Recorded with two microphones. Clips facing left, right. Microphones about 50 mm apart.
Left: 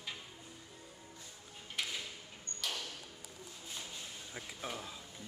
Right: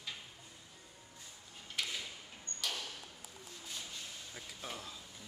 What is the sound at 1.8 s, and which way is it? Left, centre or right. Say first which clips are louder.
Drawer open or close: even; centre.